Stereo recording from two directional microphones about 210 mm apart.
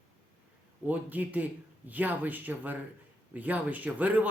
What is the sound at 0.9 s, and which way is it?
Speech, 10° right (ahead or behind).